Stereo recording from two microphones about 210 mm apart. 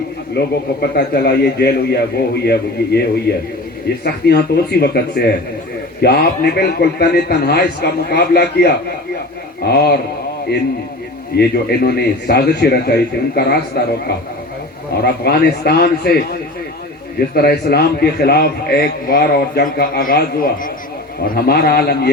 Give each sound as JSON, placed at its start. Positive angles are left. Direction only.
{"t": 0.3, "sound": "a man's voice", "side_deg": 50}
{"t": 11.3, "sound": "a man's voice", "side_deg": 50}
{"t": 15.0, "sound": "a man's voice", "side_deg": 50}
{"t": 17.3, "sound": "a man's voice", "side_deg": 50}